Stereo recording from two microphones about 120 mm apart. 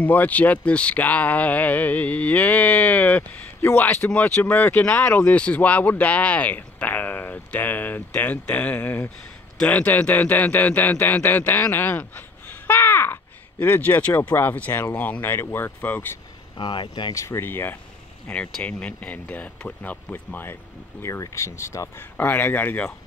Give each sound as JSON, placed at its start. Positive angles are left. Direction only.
{"t": 0.0, "sound": "speech", "side_deg": 15}
{"t": 16.5, "sound": "speech", "side_deg": 45}
{"t": 17.1, "sound": "speech", "side_deg": 25}